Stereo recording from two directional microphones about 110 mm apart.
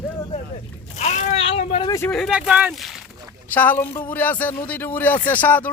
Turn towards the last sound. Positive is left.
turn(degrees=15)  # may be behind; listen again after turning